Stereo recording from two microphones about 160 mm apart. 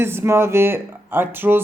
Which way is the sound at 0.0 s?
15° right (ahead or behind).